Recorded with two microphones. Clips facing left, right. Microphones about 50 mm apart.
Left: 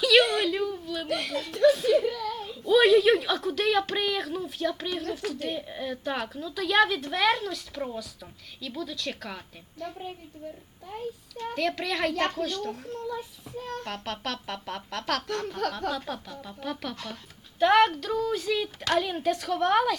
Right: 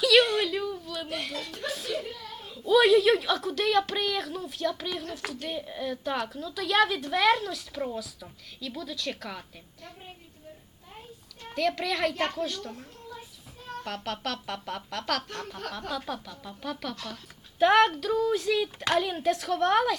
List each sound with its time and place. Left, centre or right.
0.0 s a sound: centre
1.0 s a child's voice: left
1.6 s a woman's voice: centre
2.0 s a sound: left
2.5 s a woman's voice: centre
11.5 s a woman's voice: centre
13.8 s a woman's voice: centre
17.6 s a woman's voice: centre